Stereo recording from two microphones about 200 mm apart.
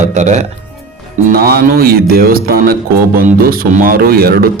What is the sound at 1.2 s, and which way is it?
A man's voice, 50° right (ahead or behind).